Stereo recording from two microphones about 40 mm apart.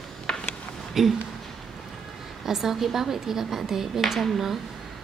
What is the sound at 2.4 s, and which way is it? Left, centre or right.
A woman's voice, centre.